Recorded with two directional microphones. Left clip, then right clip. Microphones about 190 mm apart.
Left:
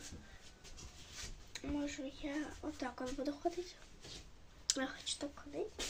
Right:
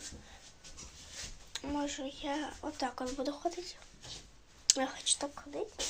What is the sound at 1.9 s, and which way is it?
Speech, 45° right (ahead or behind).